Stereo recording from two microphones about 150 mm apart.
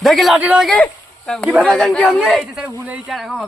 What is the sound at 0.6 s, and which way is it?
Speech, 5° left (ahead or behind).